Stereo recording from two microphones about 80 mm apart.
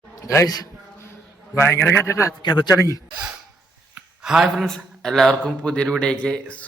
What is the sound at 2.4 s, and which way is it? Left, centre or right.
Speech, left.